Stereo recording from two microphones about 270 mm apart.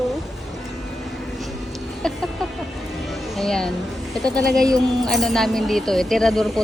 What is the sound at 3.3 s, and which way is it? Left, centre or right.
Speech, centre.